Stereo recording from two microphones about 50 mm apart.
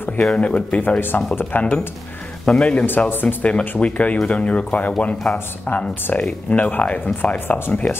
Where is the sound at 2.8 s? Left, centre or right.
Left.